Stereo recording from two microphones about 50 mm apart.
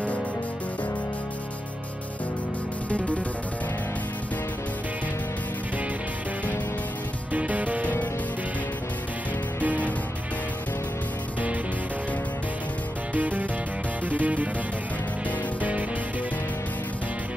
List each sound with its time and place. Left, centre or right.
7.3 s music: right
9.6 s music: right
13.1 s music: right